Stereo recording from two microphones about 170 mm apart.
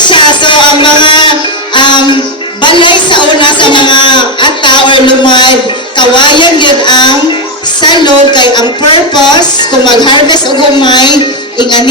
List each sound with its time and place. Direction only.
0.0 s a sound: 30° left (ahead or behind)
1.7 s music: 25° left (ahead or behind)
2.6 s a woman's voice: 30° left (ahead or behind)